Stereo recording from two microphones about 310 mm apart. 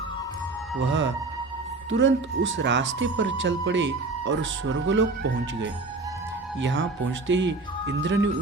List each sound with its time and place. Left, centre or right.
0.8 s speech: right
6.6 s speech: right